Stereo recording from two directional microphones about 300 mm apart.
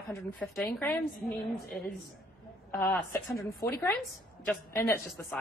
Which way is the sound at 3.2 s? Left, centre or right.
Centre.